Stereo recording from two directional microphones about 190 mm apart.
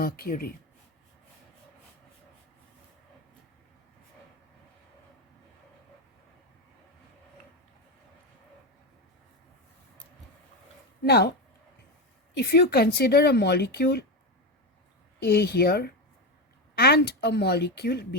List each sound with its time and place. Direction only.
0.0 s speech: 50° left (ahead or behind)
11.0 s speech: 60° left (ahead or behind)
12.4 s speech: 60° left (ahead or behind)
15.2 s speech: 60° left (ahead or behind)